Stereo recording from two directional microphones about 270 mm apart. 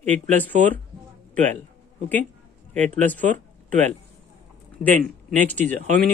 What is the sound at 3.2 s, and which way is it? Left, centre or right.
Speech, right.